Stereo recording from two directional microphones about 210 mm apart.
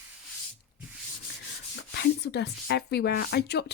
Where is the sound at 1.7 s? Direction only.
55° left (ahead or behind).